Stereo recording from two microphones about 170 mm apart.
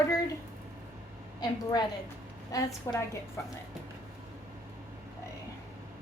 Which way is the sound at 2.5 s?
20° left (ahead or behind).